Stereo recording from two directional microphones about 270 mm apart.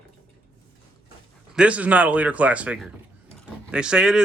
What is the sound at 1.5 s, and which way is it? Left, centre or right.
Speech, centre.